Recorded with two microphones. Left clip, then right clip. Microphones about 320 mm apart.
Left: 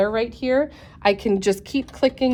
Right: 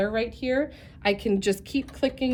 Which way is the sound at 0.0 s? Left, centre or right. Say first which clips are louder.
Left 5 dB; centre.